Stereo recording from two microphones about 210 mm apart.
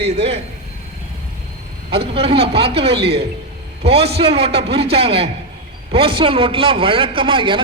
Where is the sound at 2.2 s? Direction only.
30° right (ahead or behind).